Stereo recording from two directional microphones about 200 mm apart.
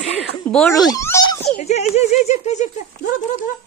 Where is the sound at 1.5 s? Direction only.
35° left (ahead or behind).